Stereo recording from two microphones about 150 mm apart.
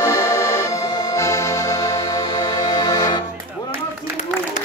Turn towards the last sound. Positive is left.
turn(degrees=25)  # may be behind; listen again after turning